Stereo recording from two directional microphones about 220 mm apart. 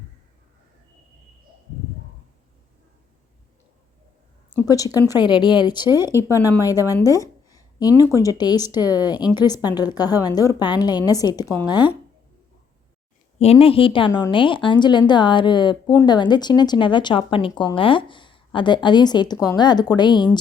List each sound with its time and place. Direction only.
4.7 s a woman's voice: 15° left (ahead or behind)
5.9 s speech: 10° right (ahead or behind)
6.1 s a woman's voice: 15° left (ahead or behind)
13.4 s a woman's voice: 25° left (ahead or behind)